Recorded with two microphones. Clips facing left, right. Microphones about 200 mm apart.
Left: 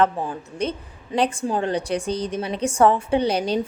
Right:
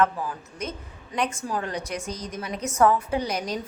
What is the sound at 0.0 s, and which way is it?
Speech, 30° left (ahead or behind).